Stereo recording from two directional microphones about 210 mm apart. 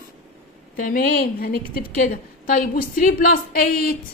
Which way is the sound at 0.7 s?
40° left (ahead or behind).